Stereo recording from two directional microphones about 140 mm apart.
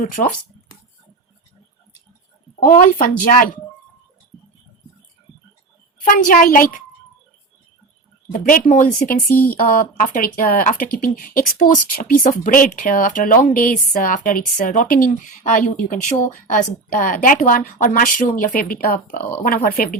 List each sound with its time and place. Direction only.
0.2 s speech: 50° left (ahead or behind)
2.6 s speech: 75° left (ahead or behind)
6.1 s speech: 70° left (ahead or behind)
8.3 s speech: 75° left (ahead or behind)
18.5 s speech: 90° left
19.5 s speech: 90° left